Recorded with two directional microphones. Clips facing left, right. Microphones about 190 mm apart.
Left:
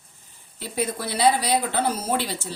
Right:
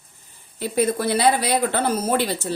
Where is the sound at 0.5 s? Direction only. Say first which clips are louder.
Right 7 dB; 55° right (ahead or behind).